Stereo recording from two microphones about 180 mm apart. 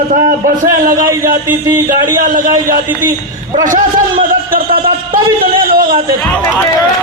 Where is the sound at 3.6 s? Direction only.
50° right (ahead or behind).